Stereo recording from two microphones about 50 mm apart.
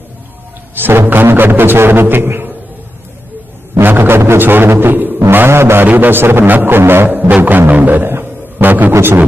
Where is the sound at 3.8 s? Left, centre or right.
Right.